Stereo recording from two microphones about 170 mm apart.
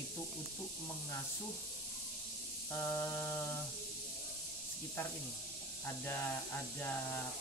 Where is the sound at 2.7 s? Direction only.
20° left (ahead or behind).